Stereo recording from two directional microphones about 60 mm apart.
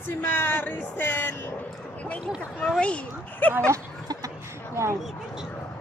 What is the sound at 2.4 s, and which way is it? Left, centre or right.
Speech, left.